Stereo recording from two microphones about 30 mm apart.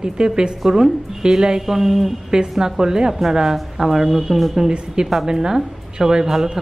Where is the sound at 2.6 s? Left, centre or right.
Centre.